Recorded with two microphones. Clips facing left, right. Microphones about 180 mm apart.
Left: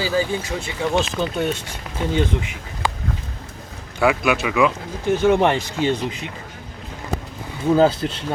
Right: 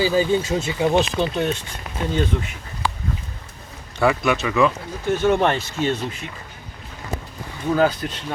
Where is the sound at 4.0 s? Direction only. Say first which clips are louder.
Left 1 dB; 5° left (ahead or behind).